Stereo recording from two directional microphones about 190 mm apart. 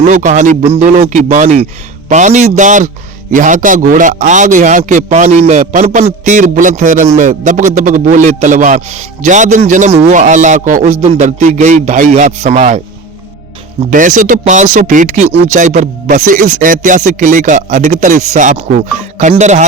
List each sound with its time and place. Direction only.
0.0 s speech: 40° right (ahead or behind)
13.9 s speech: 45° right (ahead or behind)